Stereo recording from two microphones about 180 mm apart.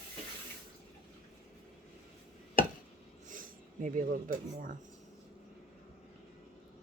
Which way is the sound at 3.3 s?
45° right (ahead or behind).